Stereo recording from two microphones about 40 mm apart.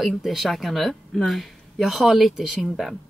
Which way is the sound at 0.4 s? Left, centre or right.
Centre.